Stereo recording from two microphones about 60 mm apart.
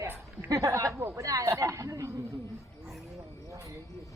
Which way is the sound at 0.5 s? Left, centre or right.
Right.